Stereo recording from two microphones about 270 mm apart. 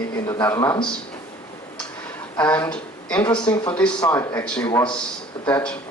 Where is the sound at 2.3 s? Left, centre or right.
Centre.